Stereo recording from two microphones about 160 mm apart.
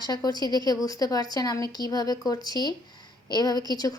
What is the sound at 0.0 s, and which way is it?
A woman's voice, 25° left (ahead or behind).